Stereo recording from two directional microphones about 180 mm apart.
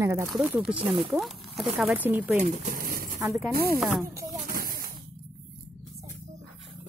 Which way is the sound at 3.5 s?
60° right (ahead or behind).